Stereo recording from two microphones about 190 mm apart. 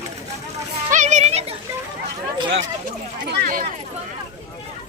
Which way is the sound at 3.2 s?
50° right (ahead or behind).